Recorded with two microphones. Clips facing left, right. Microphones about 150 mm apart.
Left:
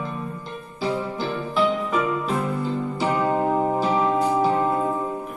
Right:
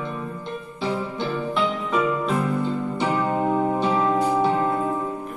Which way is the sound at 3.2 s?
30° left (ahead or behind).